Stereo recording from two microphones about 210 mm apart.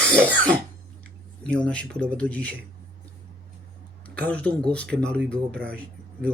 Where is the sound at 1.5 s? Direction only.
5° left (ahead or behind).